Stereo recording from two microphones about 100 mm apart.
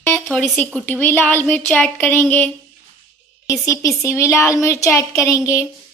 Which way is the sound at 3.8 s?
30° left (ahead or behind).